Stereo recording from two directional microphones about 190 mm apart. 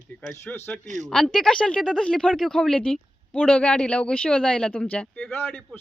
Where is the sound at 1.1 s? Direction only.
Centre (ahead or behind).